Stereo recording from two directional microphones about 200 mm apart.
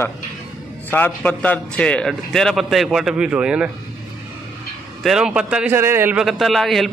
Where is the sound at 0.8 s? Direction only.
10° left (ahead or behind).